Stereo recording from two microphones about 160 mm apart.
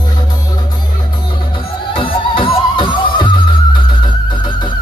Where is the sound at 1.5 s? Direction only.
30° left (ahead or behind).